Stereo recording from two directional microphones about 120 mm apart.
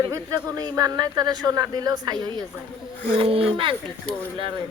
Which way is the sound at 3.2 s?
50° right (ahead or behind).